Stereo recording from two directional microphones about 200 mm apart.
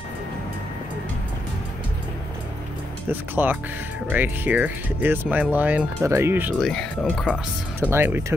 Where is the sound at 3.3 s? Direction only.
10° right (ahead or behind).